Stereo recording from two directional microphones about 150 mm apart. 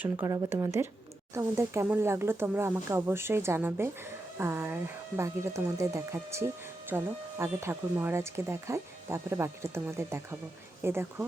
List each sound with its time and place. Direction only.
0.3 s speech: 20° right (ahead or behind)